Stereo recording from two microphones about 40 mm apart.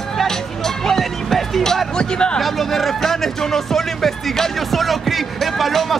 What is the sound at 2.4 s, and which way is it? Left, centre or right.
Music, centre.